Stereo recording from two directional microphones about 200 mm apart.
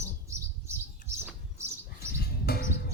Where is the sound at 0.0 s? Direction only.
15° right (ahead or behind).